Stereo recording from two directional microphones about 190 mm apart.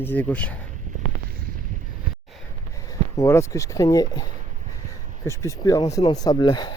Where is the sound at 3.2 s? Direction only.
15° left (ahead or behind).